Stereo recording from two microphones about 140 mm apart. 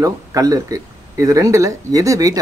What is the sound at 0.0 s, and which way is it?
Speech, 25° right (ahead or behind).